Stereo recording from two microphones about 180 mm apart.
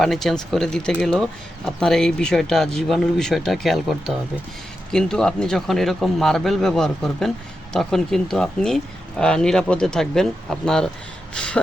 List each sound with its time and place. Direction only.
0.0 s speech: centre (ahead or behind)